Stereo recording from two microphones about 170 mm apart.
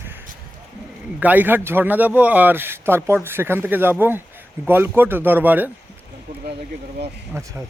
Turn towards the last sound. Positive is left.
turn(degrees=-15)  # may be behind; listen again after turning